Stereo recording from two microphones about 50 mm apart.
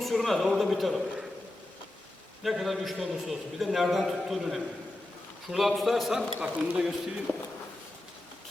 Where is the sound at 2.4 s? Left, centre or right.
Centre.